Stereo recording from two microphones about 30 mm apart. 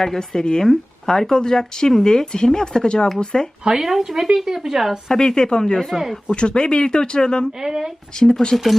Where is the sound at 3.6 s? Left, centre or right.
Right.